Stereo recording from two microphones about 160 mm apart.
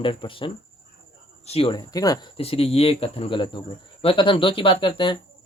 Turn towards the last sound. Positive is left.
turn(degrees=30)  # may be behind; listen again after turning